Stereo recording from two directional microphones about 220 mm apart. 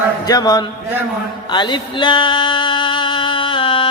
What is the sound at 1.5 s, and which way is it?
Music, 20° left (ahead or behind).